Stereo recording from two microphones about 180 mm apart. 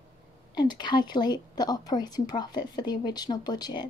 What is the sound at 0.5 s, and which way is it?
Speech, 25° left (ahead or behind).